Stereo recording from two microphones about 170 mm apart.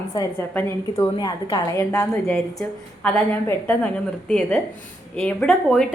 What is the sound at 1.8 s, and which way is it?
A woman's voice, 15° left (ahead or behind).